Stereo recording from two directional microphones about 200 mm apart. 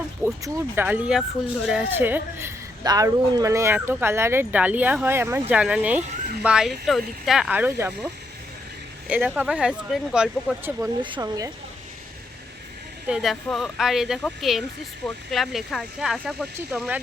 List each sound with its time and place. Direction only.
0.4 s a woman's voice: 10° right (ahead or behind)
11.0 s speech: 20° right (ahead or behind)
13.1 s a woman's voice: centre (ahead or behind)